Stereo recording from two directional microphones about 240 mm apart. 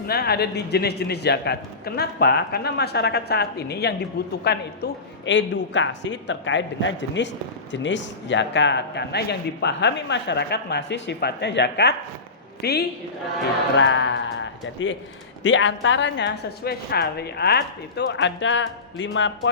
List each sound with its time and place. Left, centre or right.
0.1 s a woman's voice: left